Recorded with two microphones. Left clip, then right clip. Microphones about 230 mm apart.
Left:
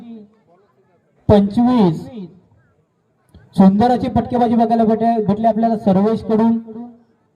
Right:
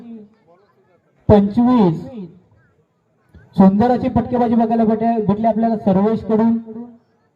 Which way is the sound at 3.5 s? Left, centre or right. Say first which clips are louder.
Left 1 dB; left.